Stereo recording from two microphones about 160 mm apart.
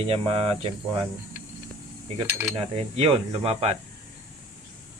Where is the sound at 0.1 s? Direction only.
40° right (ahead or behind).